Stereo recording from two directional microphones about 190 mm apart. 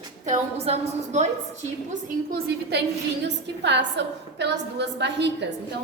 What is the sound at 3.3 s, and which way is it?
A woman's voice, 65° right (ahead or behind).